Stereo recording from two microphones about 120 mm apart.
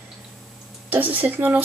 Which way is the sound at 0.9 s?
15° right (ahead or behind).